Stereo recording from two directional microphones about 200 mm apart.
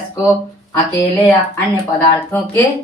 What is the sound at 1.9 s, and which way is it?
Speech, 10° left (ahead or behind).